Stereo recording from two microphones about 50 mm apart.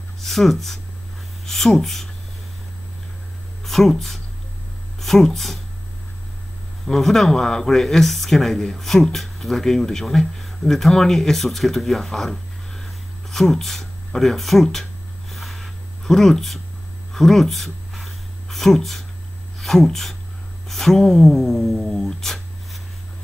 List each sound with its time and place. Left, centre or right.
0.2 s speech: centre
3.6 s speech: centre
6.9 s speech: centre
15.3 s a sound: centre
19.6 s speech: centre